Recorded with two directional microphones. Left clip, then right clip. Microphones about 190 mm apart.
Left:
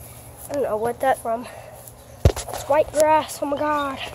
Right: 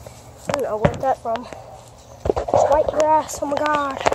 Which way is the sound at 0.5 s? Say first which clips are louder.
Right 1 dB; 5° left (ahead or behind).